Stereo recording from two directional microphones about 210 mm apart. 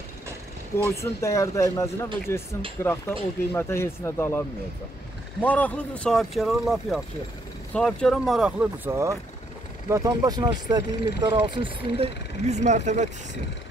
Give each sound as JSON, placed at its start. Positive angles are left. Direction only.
{"t": 0.7, "sound": "speech", "side_deg": 10}